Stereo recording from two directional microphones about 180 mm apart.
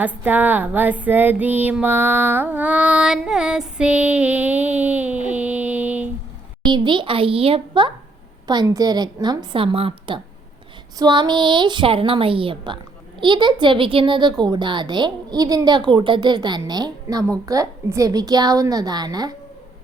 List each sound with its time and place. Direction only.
0.0 s female singing: 10° right (ahead or behind)
6.7 s a woman's voice: 25° right (ahead or behind)